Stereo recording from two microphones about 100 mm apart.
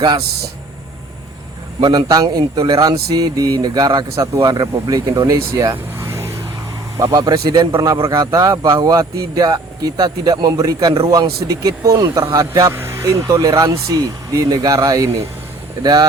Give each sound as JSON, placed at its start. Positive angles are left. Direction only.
{"t": 1.8, "sound": "speech", "side_deg": -40}
{"t": 5.7, "sound": "vehicle", "side_deg": -25}
{"t": 6.9, "sound": "speech", "side_deg": -40}
{"t": 7.9, "sound": "speech", "side_deg": -55}
{"t": 8.2, "sound": "speech", "side_deg": -35}